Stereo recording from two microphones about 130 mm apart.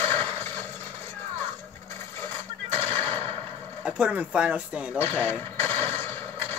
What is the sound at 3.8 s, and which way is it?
Speech, 10° right (ahead or behind).